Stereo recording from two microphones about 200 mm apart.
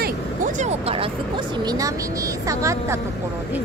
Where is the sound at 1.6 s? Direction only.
20° right (ahead or behind).